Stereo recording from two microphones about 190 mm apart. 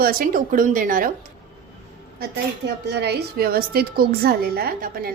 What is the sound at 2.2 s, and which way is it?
A woman's voice, 60° right (ahead or behind).